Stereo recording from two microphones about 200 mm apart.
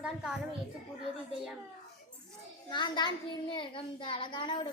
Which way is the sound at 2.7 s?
25° left (ahead or behind).